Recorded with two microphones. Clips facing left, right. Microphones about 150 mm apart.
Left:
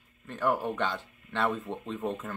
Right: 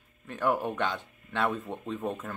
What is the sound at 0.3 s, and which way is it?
Speech, 10° right (ahead or behind).